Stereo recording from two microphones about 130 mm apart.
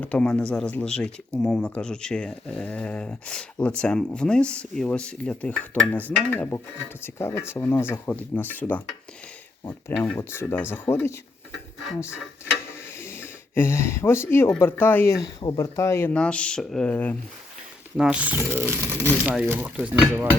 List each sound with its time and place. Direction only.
0.0 s speech: 10° left (ahead or behind)
10.0 s speech: 20° left (ahead or behind)
13.0 s speech: 20° left (ahead or behind)
16.1 s speech: 10° left (ahead or behind)
17.9 s speech: 10° right (ahead or behind)